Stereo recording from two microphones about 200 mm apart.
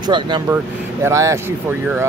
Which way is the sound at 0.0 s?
25° right (ahead or behind).